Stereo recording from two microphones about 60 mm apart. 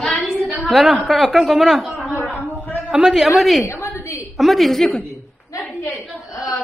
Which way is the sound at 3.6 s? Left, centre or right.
Left.